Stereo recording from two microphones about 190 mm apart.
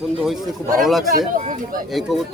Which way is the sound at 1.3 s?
45° right (ahead or behind).